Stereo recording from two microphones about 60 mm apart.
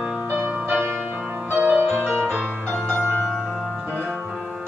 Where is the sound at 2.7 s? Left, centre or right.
Centre.